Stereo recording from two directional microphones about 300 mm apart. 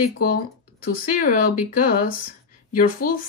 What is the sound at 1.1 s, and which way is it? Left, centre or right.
Speech, left.